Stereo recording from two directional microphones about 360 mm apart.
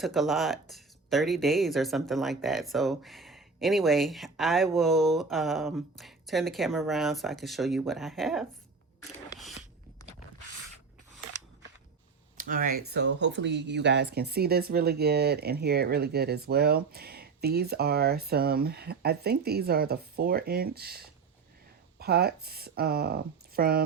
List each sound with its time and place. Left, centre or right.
0.0 s speech: centre
12.4 s speech: right